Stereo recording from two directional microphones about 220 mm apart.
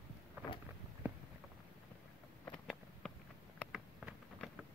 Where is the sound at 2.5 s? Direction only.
Centre (ahead or behind).